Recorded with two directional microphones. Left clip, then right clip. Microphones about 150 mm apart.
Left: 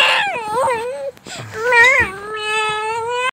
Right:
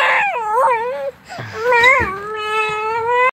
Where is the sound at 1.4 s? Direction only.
5° left (ahead or behind).